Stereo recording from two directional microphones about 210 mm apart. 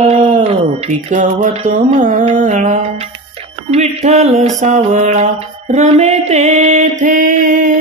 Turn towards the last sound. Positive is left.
turn(degrees=-40)  # may be behind; listen again after turning